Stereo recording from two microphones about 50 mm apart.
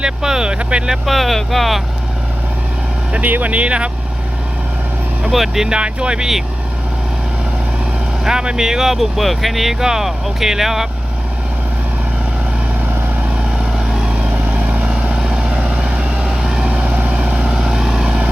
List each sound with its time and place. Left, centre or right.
0.0 s speech: centre
0.9 s speech: centre
3.1 s speech: right
5.3 s speech: centre
5.6 s speech: centre
8.2 s speech: centre
13.7 s vehicle: centre
14.2 s vehicle: right
16.6 s vehicle: right
17.2 s vehicle: centre